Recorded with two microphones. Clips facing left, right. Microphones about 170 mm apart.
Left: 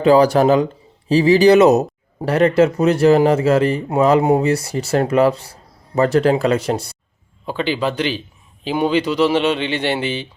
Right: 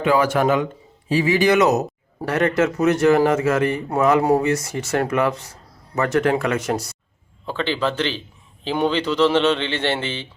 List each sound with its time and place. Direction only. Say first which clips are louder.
0.0 s speech: left 6 dB; 35° left (ahead or behind)
7.4 s speech: left 2 dB; 15° left (ahead or behind)